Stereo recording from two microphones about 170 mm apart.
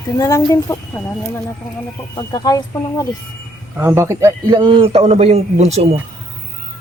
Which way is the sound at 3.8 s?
15° right (ahead or behind).